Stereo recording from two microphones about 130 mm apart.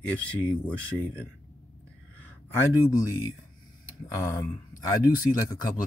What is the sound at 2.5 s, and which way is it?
Speech, 25° left (ahead or behind).